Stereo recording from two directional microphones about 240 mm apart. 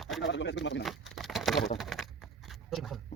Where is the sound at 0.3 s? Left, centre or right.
Left.